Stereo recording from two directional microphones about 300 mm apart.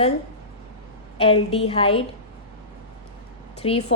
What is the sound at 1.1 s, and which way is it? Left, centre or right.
Speech, centre.